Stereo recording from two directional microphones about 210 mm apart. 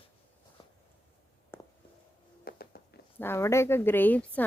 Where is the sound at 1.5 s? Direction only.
10° left (ahead or behind).